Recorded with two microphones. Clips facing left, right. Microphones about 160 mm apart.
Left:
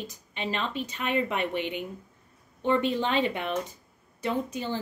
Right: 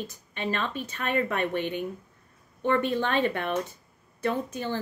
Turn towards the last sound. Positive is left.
turn(degrees=15)  # may be behind; listen again after turning